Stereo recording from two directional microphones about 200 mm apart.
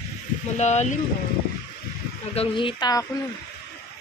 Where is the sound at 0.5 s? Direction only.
35° left (ahead or behind).